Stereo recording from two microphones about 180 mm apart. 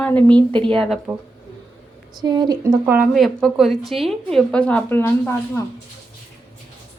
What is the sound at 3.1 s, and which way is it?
A woman's voice, centre (ahead or behind).